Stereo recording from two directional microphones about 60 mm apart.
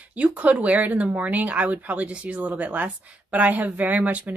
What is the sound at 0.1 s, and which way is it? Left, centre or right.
Speech, right.